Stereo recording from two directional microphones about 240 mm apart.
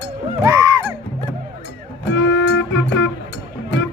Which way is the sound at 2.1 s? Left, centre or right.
Left.